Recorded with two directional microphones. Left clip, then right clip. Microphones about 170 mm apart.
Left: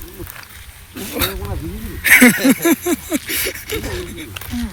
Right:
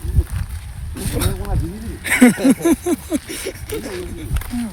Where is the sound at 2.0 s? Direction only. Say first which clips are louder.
Left 4 dB; 5° right (ahead or behind).